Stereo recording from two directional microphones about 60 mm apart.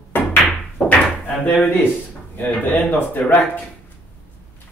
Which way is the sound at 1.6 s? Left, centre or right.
Left.